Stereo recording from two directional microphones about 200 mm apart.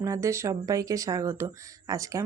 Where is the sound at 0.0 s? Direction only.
15° right (ahead or behind).